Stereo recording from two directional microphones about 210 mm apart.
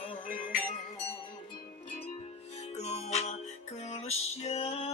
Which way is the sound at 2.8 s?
30° left (ahead or behind).